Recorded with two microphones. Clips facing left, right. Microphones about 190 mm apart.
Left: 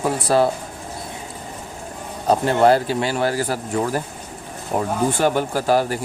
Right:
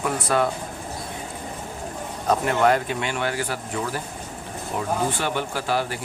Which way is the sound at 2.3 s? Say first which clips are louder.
Left 4 dB; 30° left (ahead or behind).